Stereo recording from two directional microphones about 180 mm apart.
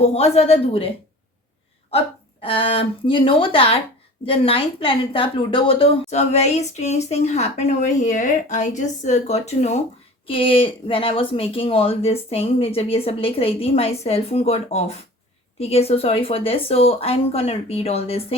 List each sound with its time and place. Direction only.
0.0 s a woman's voice: 35° left (ahead or behind)
2.4 s a woman's voice: 30° left (ahead or behind)